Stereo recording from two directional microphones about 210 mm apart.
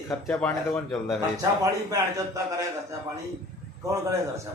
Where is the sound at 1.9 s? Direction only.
15° right (ahead or behind).